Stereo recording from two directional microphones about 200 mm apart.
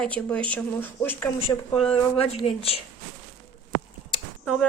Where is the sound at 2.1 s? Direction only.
30° left (ahead or behind).